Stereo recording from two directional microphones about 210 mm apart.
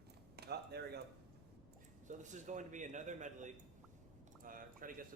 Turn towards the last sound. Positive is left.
turn(degrees=-40)  # may be behind; listen again after turning